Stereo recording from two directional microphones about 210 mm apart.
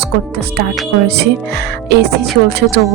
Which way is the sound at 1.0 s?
50° right (ahead or behind).